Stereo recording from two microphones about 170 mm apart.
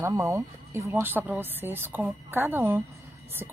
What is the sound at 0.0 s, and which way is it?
A woman's voice, 20° right (ahead or behind).